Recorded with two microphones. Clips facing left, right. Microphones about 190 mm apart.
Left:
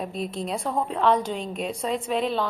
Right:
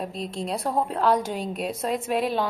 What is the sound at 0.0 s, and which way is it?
A woman's voice, centre (ahead or behind).